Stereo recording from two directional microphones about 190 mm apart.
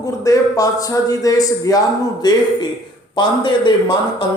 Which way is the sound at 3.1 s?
25° left (ahead or behind).